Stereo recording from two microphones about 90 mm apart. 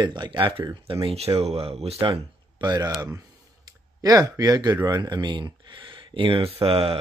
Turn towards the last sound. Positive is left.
turn(degrees=-90)